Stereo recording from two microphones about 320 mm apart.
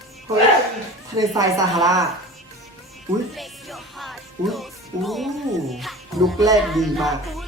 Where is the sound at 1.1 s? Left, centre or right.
Centre.